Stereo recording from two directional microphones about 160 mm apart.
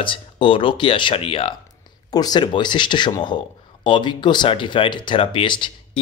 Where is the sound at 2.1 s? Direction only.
25° left (ahead or behind).